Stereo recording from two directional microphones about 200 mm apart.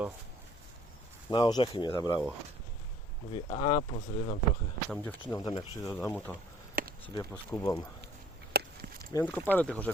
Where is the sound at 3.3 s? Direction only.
25° left (ahead or behind).